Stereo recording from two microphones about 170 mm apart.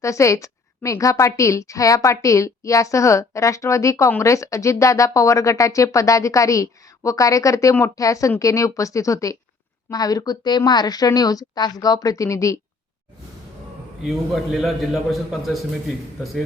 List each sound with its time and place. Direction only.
0.0 s a woman's voice: 15° left (ahead or behind)
14.0 s a man's voice: centre (ahead or behind)